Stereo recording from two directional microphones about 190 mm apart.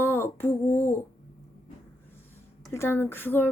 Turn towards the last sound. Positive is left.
turn(degrees=10)  # may be behind; listen again after turning